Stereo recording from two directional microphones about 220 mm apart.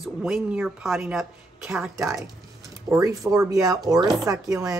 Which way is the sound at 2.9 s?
15° right (ahead or behind).